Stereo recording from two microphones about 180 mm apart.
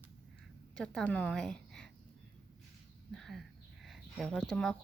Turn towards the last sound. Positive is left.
turn(degrees=0)  # may be behind; listen again after turning